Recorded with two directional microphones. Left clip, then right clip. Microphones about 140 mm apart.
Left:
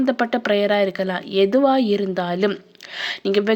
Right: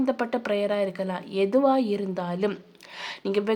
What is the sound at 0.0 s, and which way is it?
Speech, 20° left (ahead or behind).